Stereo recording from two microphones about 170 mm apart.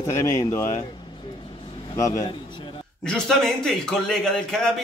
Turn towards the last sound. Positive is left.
turn(degrees=5)  # may be behind; listen again after turning